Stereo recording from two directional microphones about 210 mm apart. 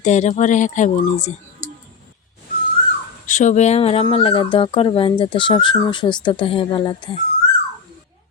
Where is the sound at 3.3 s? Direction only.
35° left (ahead or behind).